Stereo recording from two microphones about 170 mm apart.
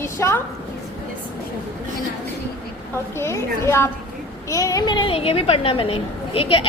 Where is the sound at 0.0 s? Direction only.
15° left (ahead or behind).